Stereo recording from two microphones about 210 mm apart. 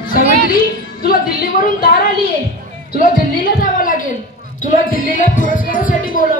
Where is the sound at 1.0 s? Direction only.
45° left (ahead or behind).